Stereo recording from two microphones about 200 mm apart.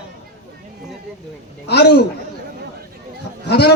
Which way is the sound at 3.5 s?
55° left (ahead or behind).